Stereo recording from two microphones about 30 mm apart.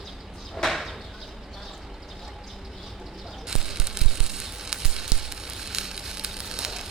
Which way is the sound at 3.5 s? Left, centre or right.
Right.